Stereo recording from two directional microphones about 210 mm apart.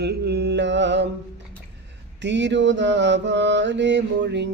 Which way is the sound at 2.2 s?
60° right (ahead or behind).